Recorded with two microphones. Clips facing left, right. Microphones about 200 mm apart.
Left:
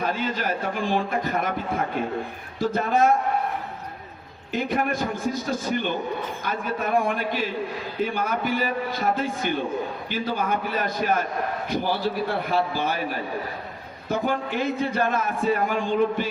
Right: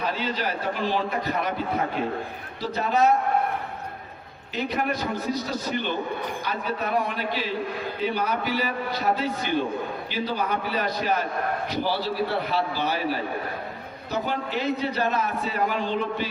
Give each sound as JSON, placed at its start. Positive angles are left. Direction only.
{"t": 0.0, "sound": "a man's voice", "side_deg": 50}
{"t": 2.6, "sound": "a man's voice", "side_deg": 50}
{"t": 4.5, "sound": "a man's voice", "side_deg": 50}
{"t": 14.1, "sound": "a man's voice", "side_deg": 50}